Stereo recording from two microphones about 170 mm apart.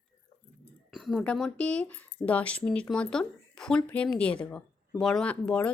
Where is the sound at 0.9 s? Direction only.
Centre (ahead or behind).